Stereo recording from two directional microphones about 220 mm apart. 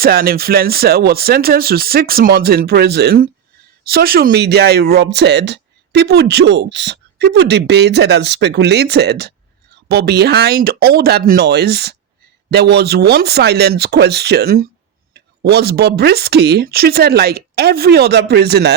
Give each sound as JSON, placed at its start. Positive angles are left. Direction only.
{"t": 0.0, "sound": "speech", "side_deg": -40}